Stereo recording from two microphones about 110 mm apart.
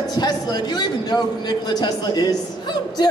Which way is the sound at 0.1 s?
40° left (ahead or behind).